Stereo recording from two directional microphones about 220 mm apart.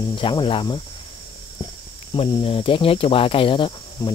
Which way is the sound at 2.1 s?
25° left (ahead or behind).